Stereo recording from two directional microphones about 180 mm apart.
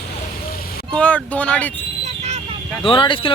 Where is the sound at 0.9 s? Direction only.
5° left (ahead or behind).